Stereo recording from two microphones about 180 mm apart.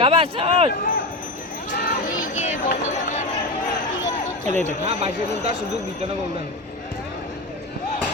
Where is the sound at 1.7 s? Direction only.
60° left (ahead or behind); by 3.2 s 40° left (ahead or behind).